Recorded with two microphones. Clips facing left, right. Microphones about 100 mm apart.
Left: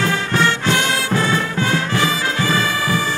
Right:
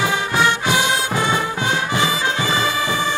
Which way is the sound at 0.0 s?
15° right (ahead or behind).